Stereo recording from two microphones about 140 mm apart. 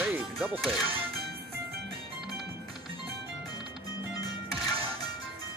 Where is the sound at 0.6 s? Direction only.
Centre (ahead or behind).